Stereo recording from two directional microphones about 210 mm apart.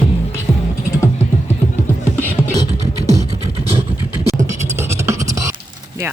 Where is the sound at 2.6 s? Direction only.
30° right (ahead or behind).